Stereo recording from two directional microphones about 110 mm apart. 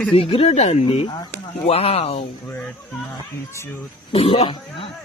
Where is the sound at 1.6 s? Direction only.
65° left (ahead or behind).